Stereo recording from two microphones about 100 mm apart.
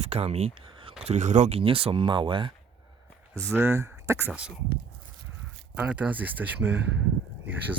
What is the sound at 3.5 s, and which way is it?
Speech, 25° right (ahead or behind).